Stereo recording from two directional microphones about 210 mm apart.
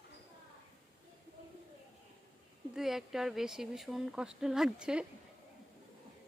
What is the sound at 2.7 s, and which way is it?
Speech, centre (ahead or behind).